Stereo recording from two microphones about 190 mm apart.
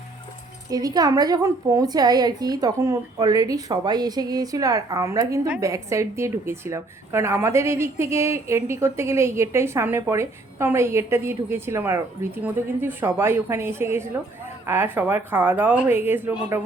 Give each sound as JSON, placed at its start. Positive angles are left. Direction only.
{"t": 0.7, "sound": "a woman's voice", "side_deg": -20}